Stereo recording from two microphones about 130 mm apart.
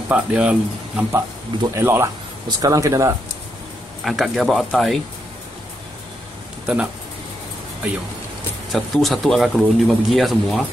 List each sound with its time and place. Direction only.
0.1 s speech: 10° right (ahead or behind)
1.8 s speech: 20° right (ahead or behind)
4.0 s speech: centre (ahead or behind)
6.6 s speech: 5° right (ahead or behind)
8.7 s speech: centre (ahead or behind)